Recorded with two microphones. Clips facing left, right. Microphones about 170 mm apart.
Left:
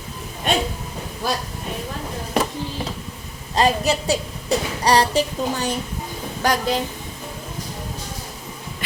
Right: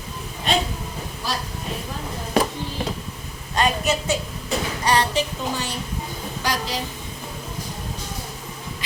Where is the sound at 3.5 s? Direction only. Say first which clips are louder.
Left 3 dB; 35° left (ahead or behind).